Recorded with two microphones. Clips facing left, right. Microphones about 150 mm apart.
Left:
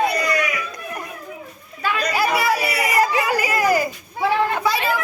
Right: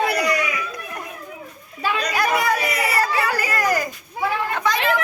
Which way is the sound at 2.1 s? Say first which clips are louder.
Left 1 dB; 5° left (ahead or behind).